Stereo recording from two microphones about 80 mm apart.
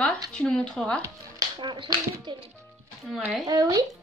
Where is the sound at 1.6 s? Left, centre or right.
Right.